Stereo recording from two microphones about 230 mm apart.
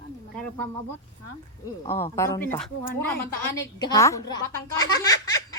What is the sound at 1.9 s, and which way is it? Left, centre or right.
A woman's voice, centre.